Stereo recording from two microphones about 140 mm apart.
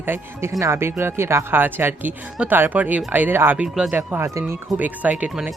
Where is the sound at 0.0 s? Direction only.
15° right (ahead or behind).